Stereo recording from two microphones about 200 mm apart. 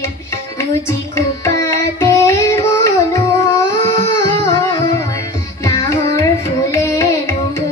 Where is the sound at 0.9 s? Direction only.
15° left (ahead or behind).